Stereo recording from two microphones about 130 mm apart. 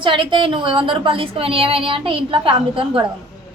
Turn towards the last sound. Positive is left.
turn(degrees=-40)  # may be behind; listen again after turning